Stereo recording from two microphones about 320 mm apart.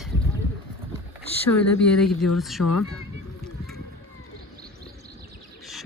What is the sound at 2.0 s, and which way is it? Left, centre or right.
Speech, centre.